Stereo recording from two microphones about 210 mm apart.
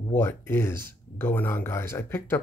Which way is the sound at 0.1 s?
10° left (ahead or behind).